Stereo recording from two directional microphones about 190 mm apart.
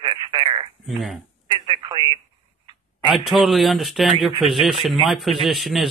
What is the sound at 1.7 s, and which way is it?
Telephone, 25° right (ahead or behind).